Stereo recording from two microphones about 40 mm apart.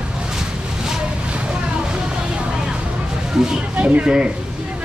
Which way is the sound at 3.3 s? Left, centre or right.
Centre.